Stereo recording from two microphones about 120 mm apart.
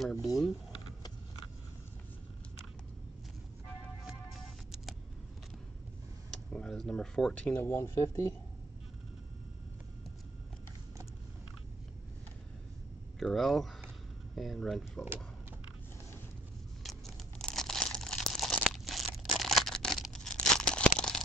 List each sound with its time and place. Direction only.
0.0 s speech: centre (ahead or behind)
6.3 s speech: 5° left (ahead or behind)
7.6 s speech: 20° left (ahead or behind)
13.2 s speech: centre (ahead or behind)
16.8 s tearing: 5° left (ahead or behind)